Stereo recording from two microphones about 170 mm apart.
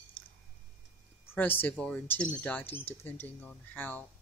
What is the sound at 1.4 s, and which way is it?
Speech, 10° left (ahead or behind).